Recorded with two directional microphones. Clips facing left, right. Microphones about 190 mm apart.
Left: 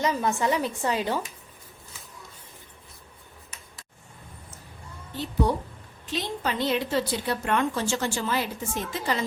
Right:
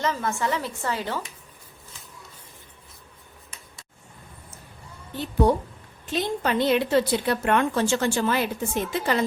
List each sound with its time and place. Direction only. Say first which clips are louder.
0.0 s a woman's voice: left 1 dB; 15° left (ahead or behind)
6.1 s a woman's voice: right 4 dB; 55° right (ahead or behind)